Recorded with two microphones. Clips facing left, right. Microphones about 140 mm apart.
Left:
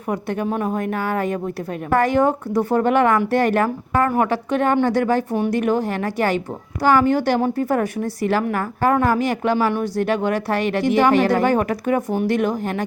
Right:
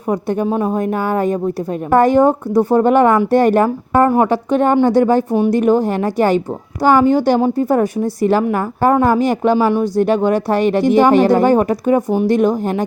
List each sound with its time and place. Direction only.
0.1 s a woman's voice: 35° right (ahead or behind)
3.9 s a woman's voice: 25° right (ahead or behind)
5.5 s a woman's voice: 35° right (ahead or behind)
7.0 s a woman's voice: 25° right (ahead or behind)
9.2 s a woman's voice: 40° right (ahead or behind)
12.3 s a woman's voice: 40° right (ahead or behind)